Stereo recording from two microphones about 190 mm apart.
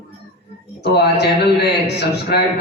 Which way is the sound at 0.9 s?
60° left (ahead or behind).